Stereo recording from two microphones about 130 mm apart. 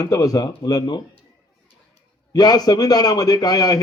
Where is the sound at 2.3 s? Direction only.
30° left (ahead or behind).